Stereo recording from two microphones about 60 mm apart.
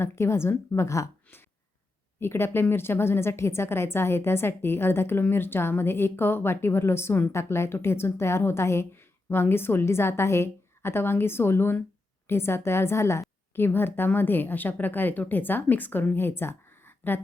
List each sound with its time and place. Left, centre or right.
0.0 s a woman's voice: left
2.1 s a woman's voice: left
13.6 s a woman's voice: left